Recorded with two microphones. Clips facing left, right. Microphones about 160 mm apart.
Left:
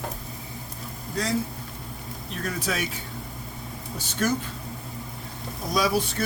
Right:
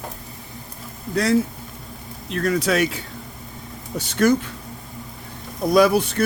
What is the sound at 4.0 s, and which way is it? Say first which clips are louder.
Speech: right 9 dB; 70° right (ahead or behind).